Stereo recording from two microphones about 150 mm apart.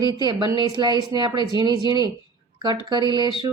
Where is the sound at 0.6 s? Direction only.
30° right (ahead or behind).